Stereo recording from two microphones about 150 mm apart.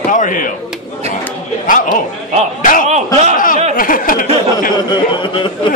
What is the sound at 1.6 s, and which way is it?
Speech, 65° left (ahead or behind).